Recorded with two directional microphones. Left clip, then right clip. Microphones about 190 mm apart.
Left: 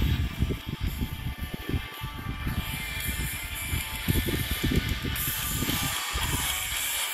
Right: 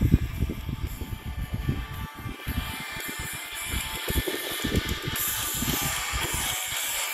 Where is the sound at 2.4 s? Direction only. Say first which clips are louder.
Right 1 dB; 20° right (ahead or behind); by 7.1 s 40° right (ahead or behind).